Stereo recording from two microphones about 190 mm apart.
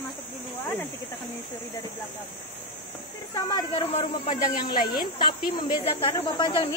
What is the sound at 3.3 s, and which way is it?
Speech, 20° left (ahead or behind).